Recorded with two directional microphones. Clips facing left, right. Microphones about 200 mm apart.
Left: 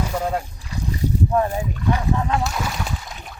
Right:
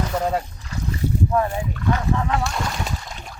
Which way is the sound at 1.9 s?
15° left (ahead or behind).